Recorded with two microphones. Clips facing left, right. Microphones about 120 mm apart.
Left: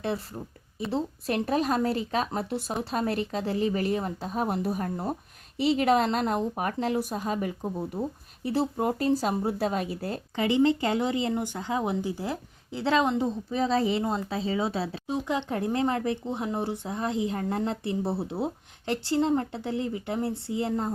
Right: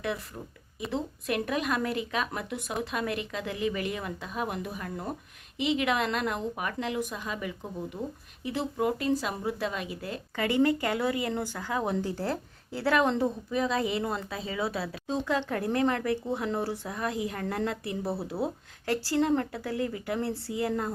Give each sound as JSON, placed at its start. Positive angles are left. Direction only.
{"t": 0.0, "sound": "a woman's voice", "side_deg": 30}
{"t": 10.3, "sound": "speech", "side_deg": 20}
{"t": 13.5, "sound": "speech", "side_deg": 30}